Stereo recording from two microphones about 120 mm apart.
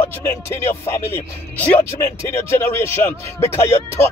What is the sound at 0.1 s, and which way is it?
Speech, 20° left (ahead or behind).